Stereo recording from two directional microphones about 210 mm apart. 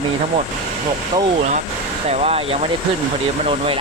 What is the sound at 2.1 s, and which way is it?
Speech, 30° right (ahead or behind).